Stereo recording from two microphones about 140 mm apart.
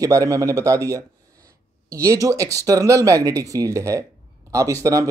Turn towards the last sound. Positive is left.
turn(degrees=-25)  # may be behind; listen again after turning